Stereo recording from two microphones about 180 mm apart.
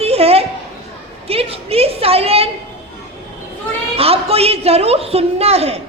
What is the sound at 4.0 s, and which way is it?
A woman's voice, 35° right (ahead or behind).